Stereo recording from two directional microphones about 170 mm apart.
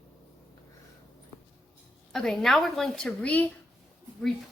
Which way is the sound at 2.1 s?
5° left (ahead or behind).